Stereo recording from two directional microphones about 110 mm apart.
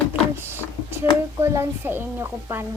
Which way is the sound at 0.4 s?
20° right (ahead or behind).